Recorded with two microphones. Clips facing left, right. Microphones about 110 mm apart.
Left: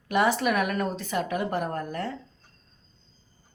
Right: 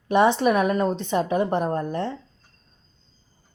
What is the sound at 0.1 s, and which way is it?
A woman's voice, 30° right (ahead or behind).